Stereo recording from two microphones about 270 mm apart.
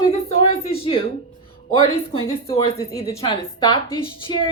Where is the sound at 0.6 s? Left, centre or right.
Left.